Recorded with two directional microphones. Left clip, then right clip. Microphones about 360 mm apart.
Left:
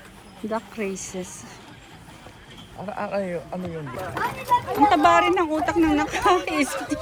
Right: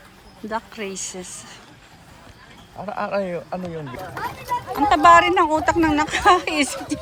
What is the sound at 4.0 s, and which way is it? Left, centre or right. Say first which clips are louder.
Speech: left 5 dB; left.